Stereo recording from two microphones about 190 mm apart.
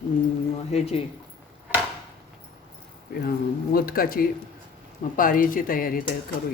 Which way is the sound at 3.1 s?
50° left (ahead or behind).